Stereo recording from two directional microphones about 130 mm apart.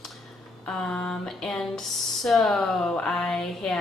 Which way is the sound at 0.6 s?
5° left (ahead or behind).